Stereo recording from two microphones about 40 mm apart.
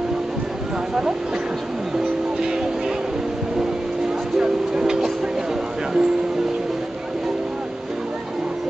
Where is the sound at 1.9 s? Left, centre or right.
Centre.